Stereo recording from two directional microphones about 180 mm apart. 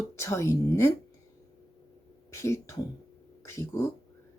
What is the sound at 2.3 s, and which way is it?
Speech, 15° left (ahead or behind).